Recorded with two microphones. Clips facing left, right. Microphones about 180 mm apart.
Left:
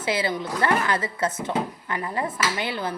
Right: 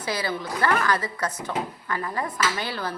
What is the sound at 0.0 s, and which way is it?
Speech, 25° left (ahead or behind).